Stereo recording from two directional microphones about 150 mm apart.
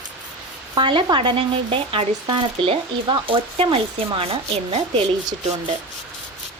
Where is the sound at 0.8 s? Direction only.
35° right (ahead or behind).